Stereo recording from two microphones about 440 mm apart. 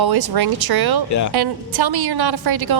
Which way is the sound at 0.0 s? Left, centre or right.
Right.